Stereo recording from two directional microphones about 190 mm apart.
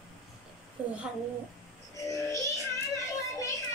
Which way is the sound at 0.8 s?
5° right (ahead or behind).